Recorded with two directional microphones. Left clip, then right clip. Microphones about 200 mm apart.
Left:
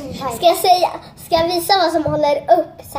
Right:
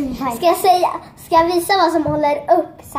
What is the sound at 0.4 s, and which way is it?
A child's voice, centre (ahead or behind).